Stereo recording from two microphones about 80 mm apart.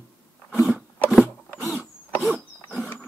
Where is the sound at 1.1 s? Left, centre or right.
Centre.